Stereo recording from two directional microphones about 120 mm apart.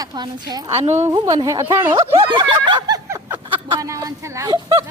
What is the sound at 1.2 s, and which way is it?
Speech, 25° right (ahead or behind).